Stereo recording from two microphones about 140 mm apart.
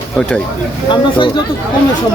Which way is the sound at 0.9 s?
35° left (ahead or behind).